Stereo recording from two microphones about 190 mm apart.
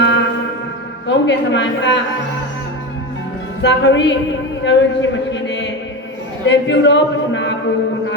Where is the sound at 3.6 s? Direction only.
70° left (ahead or behind).